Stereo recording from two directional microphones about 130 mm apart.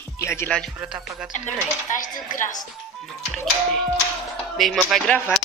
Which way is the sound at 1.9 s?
85° left.